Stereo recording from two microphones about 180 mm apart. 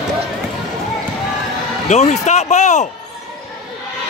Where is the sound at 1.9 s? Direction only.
40° left (ahead or behind).